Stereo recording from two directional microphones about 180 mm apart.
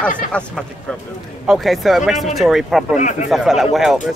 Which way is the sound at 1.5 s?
Centre (ahead or behind).